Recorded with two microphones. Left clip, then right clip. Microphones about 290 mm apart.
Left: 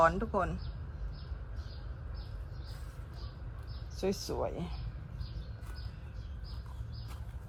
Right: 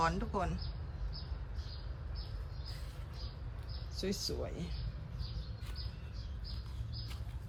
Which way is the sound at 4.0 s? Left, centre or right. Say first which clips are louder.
Left 5 dB; centre.